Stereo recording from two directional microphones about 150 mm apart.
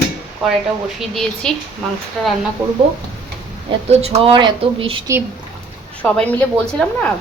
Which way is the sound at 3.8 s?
45° right (ahead or behind).